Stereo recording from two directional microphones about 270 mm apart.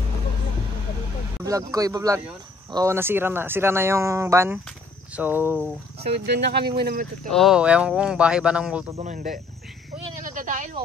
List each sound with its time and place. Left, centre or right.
1.4 s speech: centre
5.9 s speech: right
7.2 s speech: centre
8.9 s cricket: right
10.3 s a sound: right